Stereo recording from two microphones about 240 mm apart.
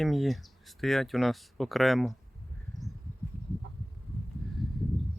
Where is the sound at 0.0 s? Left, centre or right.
Centre.